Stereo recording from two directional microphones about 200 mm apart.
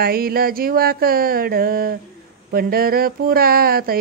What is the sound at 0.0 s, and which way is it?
Speech, 50° right (ahead or behind).